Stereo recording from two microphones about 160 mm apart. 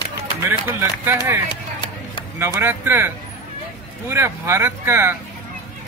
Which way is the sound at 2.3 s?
15° right (ahead or behind).